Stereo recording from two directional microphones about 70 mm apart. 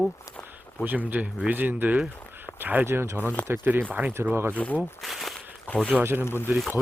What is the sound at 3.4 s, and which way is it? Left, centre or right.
Speech, left.